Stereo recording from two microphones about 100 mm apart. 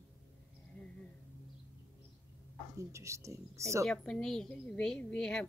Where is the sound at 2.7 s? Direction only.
30° right (ahead or behind).